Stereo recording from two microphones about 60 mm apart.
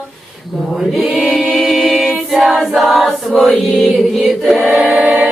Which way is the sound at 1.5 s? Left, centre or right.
Centre.